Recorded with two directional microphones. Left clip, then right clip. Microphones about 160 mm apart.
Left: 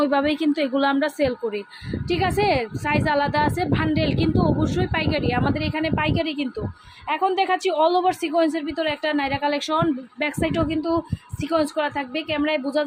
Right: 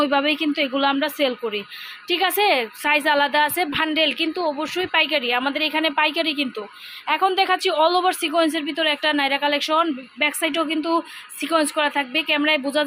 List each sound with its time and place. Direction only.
0.0 s a woman's voice: 15° left (ahead or behind)
10.5 s a woman's voice: centre (ahead or behind)